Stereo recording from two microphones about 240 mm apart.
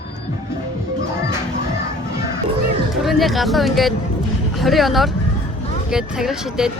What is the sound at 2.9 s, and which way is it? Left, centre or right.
Speech, centre.